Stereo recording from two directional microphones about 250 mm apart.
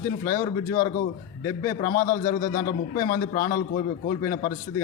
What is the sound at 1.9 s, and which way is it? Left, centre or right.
A man's voice, left.